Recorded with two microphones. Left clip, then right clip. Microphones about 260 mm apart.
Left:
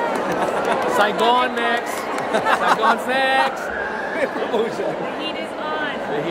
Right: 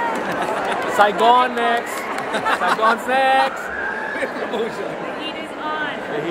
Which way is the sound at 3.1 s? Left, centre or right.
Centre.